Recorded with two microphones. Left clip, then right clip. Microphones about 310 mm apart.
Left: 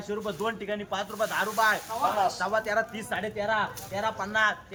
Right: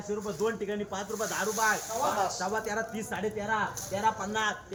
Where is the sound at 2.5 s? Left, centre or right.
Centre.